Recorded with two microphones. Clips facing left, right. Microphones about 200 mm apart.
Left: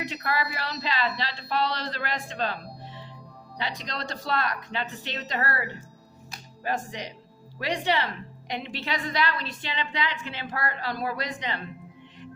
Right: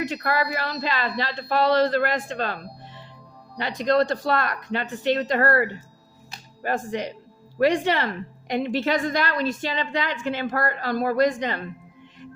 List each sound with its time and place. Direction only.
0.0 s a woman's voice: 50° right (ahead or behind)